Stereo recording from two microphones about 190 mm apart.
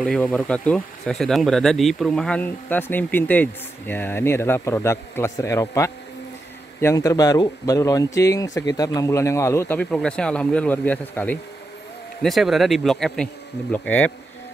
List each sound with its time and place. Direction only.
0.0 s speech: 5° left (ahead or behind)